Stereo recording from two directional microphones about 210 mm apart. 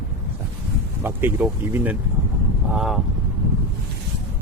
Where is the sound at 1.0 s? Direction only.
10° right (ahead or behind).